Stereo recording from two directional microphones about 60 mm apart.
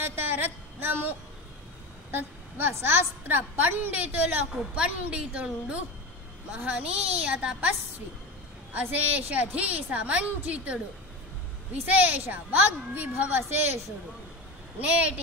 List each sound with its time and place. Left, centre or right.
0.0 s a woman's voice: right
4.7 s a woman's voice: centre
8.7 s a woman's voice: right
14.8 s a woman's voice: right